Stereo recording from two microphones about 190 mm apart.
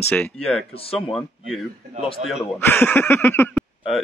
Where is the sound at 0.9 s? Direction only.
Centre (ahead or behind).